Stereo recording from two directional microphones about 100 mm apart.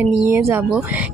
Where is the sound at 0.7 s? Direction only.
15° right (ahead or behind).